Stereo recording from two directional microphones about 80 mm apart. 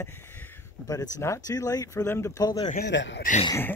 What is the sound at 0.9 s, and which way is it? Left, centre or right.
Speech, left.